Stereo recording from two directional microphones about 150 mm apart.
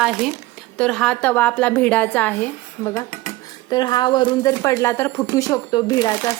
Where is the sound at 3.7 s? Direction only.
30° left (ahead or behind).